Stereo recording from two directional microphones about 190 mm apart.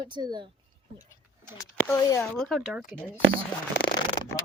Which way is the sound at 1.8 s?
15° left (ahead or behind).